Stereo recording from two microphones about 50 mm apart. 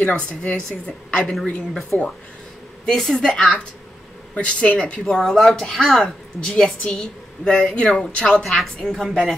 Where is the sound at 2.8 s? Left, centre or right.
Centre.